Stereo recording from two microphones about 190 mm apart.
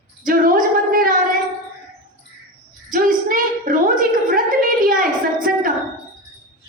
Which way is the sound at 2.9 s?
45° right (ahead or behind).